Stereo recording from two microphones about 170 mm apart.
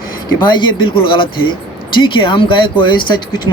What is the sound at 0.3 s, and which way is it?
Speech, 25° left (ahead or behind).